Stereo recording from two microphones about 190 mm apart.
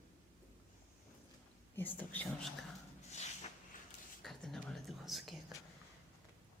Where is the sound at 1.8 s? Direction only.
10° left (ahead or behind).